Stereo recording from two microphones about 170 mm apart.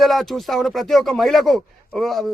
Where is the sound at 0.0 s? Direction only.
Centre (ahead or behind).